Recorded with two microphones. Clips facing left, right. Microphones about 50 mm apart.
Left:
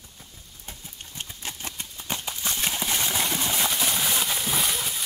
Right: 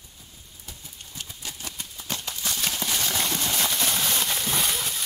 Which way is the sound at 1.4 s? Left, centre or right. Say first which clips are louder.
Left 2 dB; left.